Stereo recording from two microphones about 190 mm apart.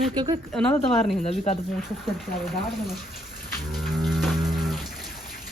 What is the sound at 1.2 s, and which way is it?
Speech, 35° left (ahead or behind).